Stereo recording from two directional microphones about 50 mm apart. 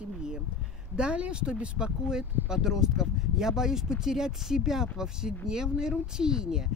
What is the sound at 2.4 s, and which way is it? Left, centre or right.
Speech, centre.